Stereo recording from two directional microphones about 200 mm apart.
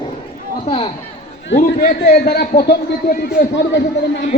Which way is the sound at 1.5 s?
45° left (ahead or behind).